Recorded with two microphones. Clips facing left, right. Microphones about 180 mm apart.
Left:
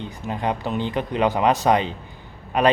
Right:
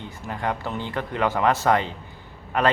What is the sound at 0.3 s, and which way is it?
Speech, 20° left (ahead or behind).